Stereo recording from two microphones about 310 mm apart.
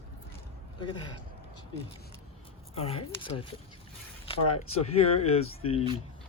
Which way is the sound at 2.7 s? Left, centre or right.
Centre.